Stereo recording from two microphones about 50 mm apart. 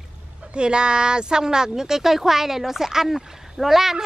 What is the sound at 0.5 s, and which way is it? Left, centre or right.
Speech, centre.